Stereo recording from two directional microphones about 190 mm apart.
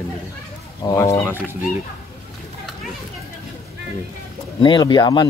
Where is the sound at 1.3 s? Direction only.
10° right (ahead or behind).